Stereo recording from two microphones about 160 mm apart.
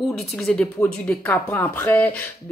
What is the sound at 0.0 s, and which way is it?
A woman's voice, centre (ahead or behind).